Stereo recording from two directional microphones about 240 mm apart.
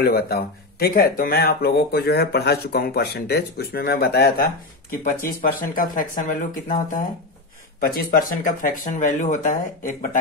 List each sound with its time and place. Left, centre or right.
0.0 s speech: left